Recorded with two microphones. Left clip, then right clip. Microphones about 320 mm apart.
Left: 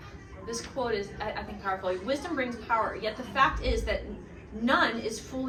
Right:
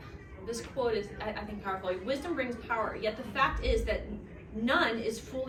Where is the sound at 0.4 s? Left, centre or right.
Centre.